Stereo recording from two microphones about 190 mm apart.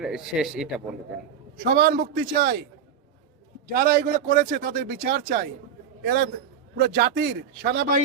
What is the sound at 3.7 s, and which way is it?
A man's voice, 50° right (ahead or behind).